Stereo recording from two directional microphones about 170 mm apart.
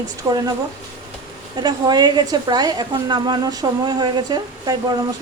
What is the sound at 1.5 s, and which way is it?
Speech, 25° right (ahead or behind).